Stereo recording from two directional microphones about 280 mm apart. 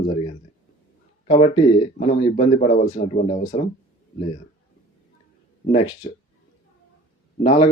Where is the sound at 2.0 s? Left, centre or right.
Left.